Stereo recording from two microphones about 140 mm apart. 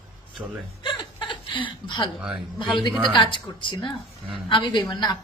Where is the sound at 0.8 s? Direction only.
35° left (ahead or behind).